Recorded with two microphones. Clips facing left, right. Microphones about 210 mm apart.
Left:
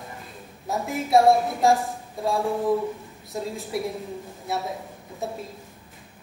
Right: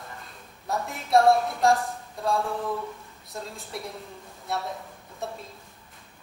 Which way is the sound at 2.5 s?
30° left (ahead or behind).